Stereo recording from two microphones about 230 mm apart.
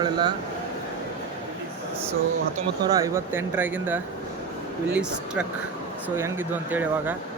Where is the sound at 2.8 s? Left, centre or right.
Centre.